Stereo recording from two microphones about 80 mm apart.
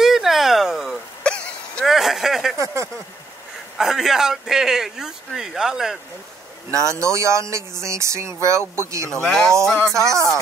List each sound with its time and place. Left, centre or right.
0.0 s a sound: centre
1.2 s throat clearing: centre
1.9 s a sound: centre
2.5 s speech: right
3.7 s speech: centre
6.7 s speech: right
9.1 s speech: centre
9.9 s speech: right